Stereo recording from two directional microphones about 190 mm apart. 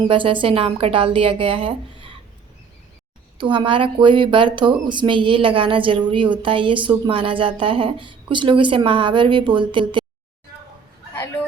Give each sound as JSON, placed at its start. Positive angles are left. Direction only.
{"t": 0.1, "sound": "speech", "side_deg": -25}
{"t": 3.3, "sound": "speech", "side_deg": -25}